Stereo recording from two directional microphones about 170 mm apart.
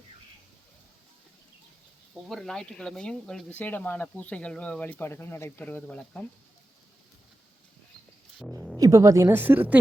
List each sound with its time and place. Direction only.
2.2 s speech: centre (ahead or behind)
8.8 s a woman's voice: 20° right (ahead or behind)